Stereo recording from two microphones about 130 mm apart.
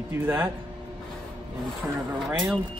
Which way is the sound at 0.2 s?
15° right (ahead or behind).